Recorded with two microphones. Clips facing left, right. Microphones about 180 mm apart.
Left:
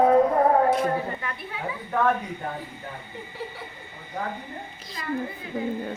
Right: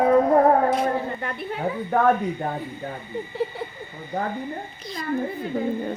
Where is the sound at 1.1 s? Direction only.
45° right (ahead or behind).